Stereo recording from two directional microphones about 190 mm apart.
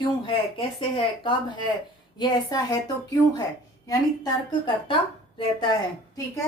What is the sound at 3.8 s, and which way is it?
Speech, 20° left (ahead or behind).